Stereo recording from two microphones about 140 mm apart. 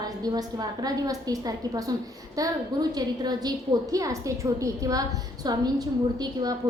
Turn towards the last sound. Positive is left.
turn(degrees=-30)  # may be behind; listen again after turning